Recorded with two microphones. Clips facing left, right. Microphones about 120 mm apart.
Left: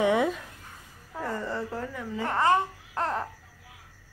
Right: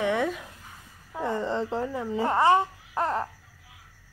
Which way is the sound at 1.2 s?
20° right (ahead or behind).